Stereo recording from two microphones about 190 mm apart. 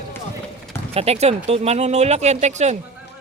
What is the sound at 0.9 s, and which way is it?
Speech, 30° right (ahead or behind).